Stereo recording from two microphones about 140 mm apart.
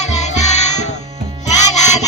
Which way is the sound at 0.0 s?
55° left (ahead or behind).